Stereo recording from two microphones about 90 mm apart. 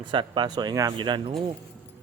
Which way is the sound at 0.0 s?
60° right (ahead or behind).